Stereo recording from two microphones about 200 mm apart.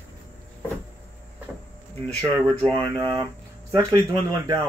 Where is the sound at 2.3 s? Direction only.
10° left (ahead or behind).